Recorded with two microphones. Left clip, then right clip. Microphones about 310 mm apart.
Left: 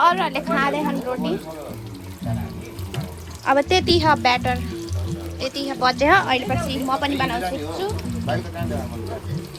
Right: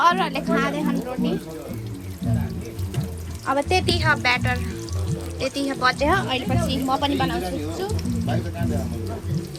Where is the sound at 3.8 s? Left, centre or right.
Centre.